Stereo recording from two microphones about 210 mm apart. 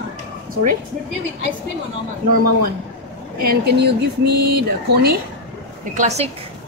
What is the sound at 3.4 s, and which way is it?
Speech, 50° right (ahead or behind).